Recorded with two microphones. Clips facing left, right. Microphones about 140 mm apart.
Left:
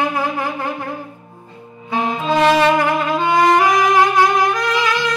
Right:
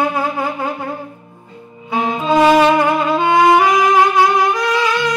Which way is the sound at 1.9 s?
15° right (ahead or behind).